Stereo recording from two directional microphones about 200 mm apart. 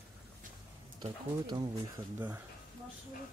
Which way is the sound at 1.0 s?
20° right (ahead or behind).